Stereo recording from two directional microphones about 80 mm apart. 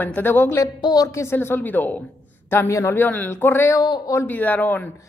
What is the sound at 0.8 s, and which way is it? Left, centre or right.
Speech, left.